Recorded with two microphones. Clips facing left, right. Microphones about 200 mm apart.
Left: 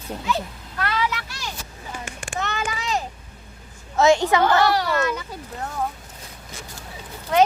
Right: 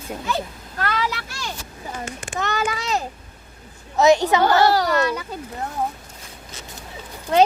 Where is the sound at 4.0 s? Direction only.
20° right (ahead or behind).